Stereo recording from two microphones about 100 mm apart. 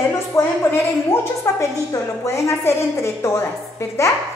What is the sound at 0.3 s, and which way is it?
Speech, 30° left (ahead or behind).